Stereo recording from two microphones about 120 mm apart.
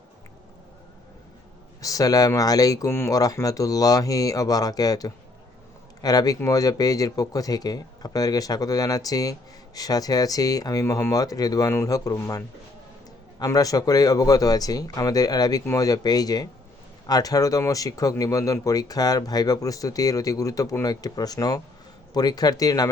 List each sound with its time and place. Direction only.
1.8 s speech: 30° left (ahead or behind)